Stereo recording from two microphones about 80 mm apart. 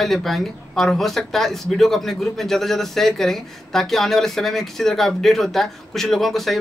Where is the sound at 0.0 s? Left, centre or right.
Centre.